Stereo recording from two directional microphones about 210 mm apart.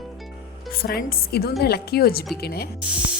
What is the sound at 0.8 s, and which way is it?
Speech, 45° left (ahead or behind).